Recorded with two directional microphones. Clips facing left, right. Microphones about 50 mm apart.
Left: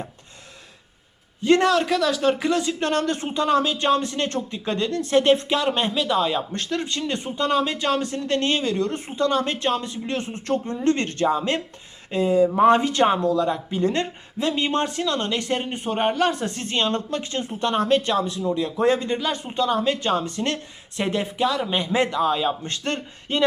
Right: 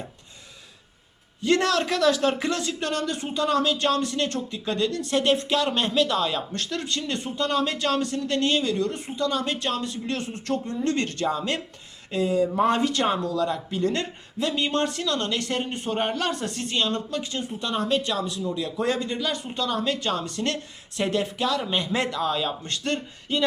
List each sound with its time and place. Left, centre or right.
1.4 s a man's voice: left
1.6 s speech: centre
2.8 s speech: left; by 5.9 s centre
5.9 s speech: centre
6.1 s speech: centre
8.0 s speech: left
16.6 s speech: left; by 22.5 s centre
22.6 s speech: left